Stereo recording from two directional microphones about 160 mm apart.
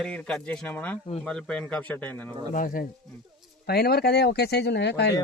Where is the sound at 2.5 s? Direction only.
60° left (ahead or behind).